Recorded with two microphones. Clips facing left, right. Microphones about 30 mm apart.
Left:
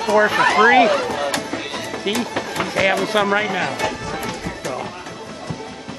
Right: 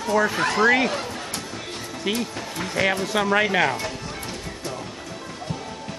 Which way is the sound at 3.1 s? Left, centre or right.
Left.